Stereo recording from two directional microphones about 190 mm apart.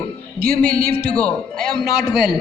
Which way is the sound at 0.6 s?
50° right (ahead or behind).